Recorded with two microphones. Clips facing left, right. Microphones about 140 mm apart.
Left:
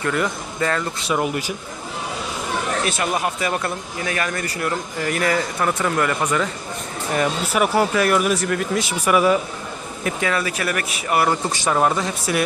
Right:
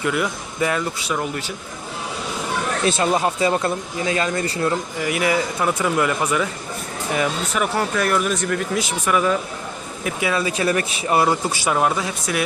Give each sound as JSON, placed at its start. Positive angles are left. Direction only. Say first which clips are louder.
{"t": 0.0, "sound": "speech", "louder": "even", "side_deg": -10}
{"t": 1.1, "sound": "speech", "louder": "left 5 dB", "side_deg": 10}
{"t": 2.8, "sound": "speech", "louder": "right 3 dB", "side_deg": -25}
{"t": 5.0, "sound": "speech", "louder": "even", "side_deg": -10}
{"t": 7.5, "sound": "speech", "louder": "left 6 dB", "side_deg": 10}
{"t": 10.0, "sound": "speech", "louder": "even", "side_deg": -10}
{"t": 11.4, "sound": "speech", "louder": "left 1 dB", "side_deg": -5}